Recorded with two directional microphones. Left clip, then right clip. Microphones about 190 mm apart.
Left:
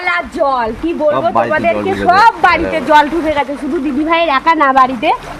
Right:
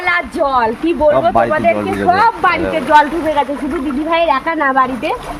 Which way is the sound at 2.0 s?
65° left (ahead or behind).